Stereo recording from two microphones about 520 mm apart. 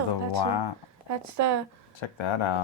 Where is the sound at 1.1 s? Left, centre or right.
Right.